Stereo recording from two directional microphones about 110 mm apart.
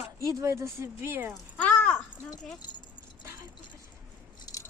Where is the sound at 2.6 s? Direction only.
40° left (ahead or behind).